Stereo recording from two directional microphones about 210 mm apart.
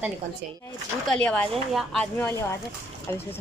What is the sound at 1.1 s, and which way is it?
Speech, 5° left (ahead or behind).